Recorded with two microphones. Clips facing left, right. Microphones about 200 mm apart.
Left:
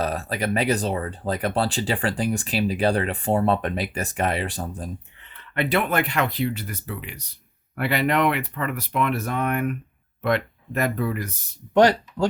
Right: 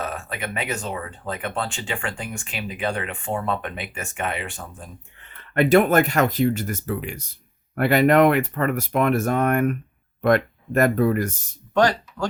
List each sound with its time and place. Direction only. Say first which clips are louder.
0.0 s speech: left 4 dB; 35° left (ahead or behind)
5.2 s speech: right 6 dB; 45° right (ahead or behind)
11.7 s speech: left 3 dB; 20° left (ahead or behind)